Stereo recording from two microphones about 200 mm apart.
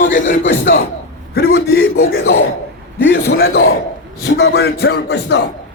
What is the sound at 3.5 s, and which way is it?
Speech, 80° left.